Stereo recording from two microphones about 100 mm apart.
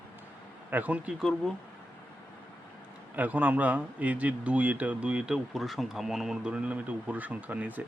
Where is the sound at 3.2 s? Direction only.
15° right (ahead or behind).